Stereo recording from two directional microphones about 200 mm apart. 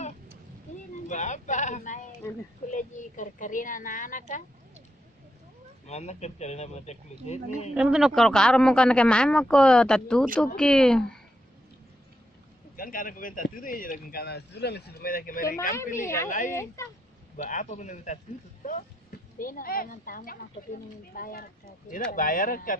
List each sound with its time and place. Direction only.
1.0 s a woman's voice: 35° left (ahead or behind)
5.9 s a woman's voice: 35° left (ahead or behind)
7.7 s speech: 5° right (ahead or behind)
12.7 s speech: 45° left (ahead or behind)
15.7 s a woman's voice: 15° left (ahead or behind)
16.3 s a woman's voice: 40° left (ahead or behind)